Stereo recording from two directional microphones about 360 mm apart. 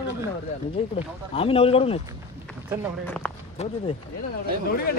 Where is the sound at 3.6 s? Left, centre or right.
Centre.